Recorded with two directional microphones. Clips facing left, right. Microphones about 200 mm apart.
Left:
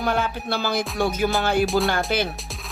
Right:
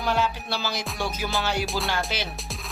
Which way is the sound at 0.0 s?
55° left (ahead or behind).